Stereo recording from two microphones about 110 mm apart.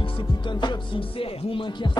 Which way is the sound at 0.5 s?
45° left (ahead or behind).